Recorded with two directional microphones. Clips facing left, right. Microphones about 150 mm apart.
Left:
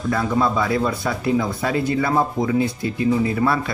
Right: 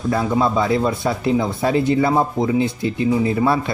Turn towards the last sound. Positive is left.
turn(degrees=-25)  # may be behind; listen again after turning